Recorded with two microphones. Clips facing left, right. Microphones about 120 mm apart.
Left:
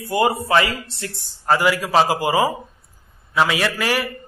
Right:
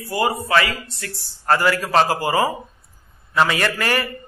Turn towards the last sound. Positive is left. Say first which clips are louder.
# even
turn(degrees=5)  # may be behind; listen again after turning